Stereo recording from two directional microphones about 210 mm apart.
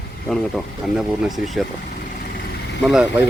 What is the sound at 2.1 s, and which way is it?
Vehicle, 40° left (ahead or behind).